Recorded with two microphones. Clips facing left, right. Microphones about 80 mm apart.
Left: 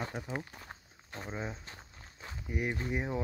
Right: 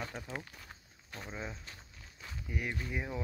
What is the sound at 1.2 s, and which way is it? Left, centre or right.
Speech, centre.